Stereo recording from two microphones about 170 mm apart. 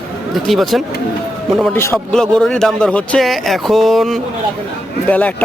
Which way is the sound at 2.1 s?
5° left (ahead or behind).